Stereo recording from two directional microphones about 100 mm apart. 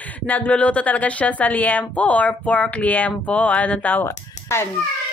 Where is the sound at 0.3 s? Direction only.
10° left (ahead or behind).